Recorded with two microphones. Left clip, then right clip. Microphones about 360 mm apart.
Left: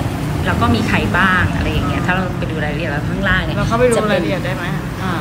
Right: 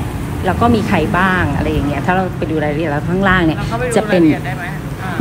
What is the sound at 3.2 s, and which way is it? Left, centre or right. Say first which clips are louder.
Speech: right 4 dB; centre.